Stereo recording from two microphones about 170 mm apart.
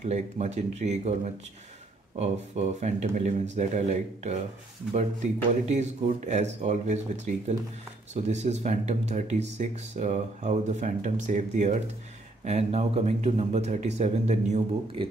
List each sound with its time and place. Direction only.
0.0 s speech: 40° right (ahead or behind)